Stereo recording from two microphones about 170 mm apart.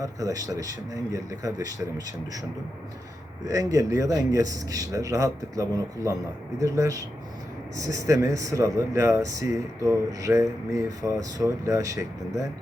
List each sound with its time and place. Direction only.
0.0 s speech: 20° right (ahead or behind)
3.4 s speech: 20° right (ahead or behind)